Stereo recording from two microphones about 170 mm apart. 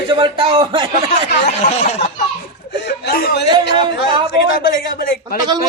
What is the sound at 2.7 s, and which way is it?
Chuckle, 80° left.